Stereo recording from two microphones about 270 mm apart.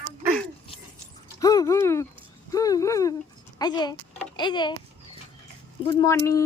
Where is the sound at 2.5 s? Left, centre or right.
Centre.